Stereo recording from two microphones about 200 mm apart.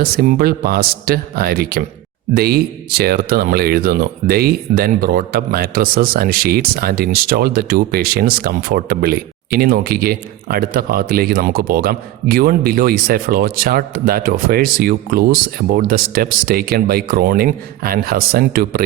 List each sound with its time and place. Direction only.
0.0 s speech: 45° right (ahead or behind)